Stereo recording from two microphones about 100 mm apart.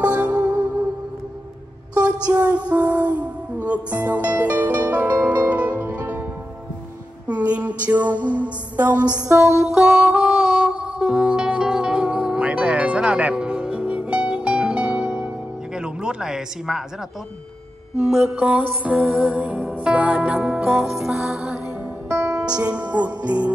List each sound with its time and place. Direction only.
0.0 s music: 15° right (ahead or behind)
2.3 s music: 15° right (ahead or behind)
7.2 s music: 15° right (ahead or behind)
9.2 s music: 30° right (ahead or behind)
9.7 s music: 5° right (ahead or behind)
18.0 s mantra: 5° right (ahead or behind)
18.3 s music: 15° right (ahead or behind)
22.1 s music: 30° right (ahead or behind)
22.6 s music: 10° right (ahead or behind)